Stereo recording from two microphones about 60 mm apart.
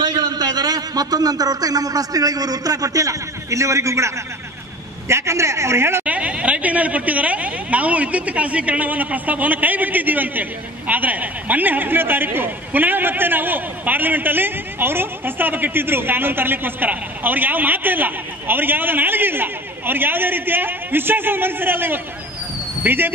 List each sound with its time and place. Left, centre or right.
0.1 s a man's voice: right
6.0 s a man's voice: right